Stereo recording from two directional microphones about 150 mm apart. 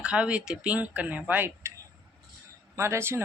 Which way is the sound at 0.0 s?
5° right (ahead or behind).